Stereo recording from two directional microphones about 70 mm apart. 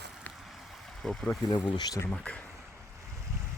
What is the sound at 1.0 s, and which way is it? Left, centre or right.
Speech, centre.